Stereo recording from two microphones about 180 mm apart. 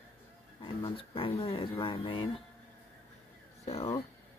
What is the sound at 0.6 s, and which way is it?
Speech, 25° left (ahead or behind).